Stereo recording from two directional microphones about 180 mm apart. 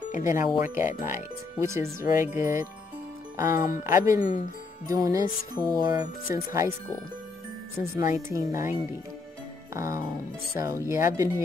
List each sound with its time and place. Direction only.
0.1 s speech: 45° left (ahead or behind)
0.6 s speech: 10° right (ahead or behind)
4.8 s music: 20° right (ahead or behind)
6.3 s speech: 20° right (ahead or behind)
7.8 s speech: 15° right (ahead or behind)
9.8 s speech: 15° right (ahead or behind)